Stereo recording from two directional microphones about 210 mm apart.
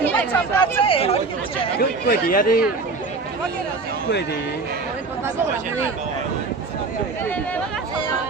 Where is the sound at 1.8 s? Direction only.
45° left (ahead or behind).